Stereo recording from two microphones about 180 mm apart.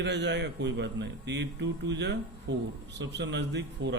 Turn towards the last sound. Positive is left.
turn(degrees=-75)  # may be behind; listen again after turning